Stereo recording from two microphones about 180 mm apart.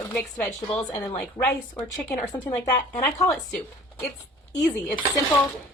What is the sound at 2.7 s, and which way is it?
Speech, 10° left (ahead or behind).